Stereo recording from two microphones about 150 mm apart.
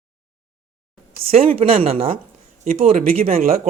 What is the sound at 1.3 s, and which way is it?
Speech, 40° right (ahead or behind).